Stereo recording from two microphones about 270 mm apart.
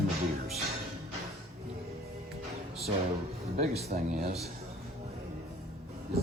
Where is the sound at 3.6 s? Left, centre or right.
Right.